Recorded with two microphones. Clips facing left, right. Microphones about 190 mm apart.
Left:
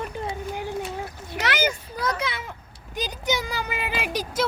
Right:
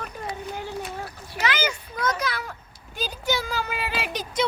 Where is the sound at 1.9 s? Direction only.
30° left (ahead or behind).